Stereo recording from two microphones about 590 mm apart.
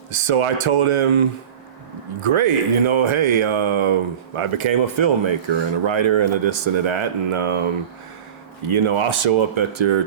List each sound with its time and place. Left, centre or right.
0.1 s speech: right
2.2 s speech: right
8.6 s speech: right